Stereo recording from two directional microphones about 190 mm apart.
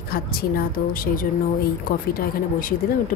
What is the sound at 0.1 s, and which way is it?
Speech, 50° left (ahead or behind).